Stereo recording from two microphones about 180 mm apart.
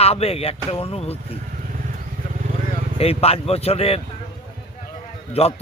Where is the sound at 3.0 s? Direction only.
35° left (ahead or behind).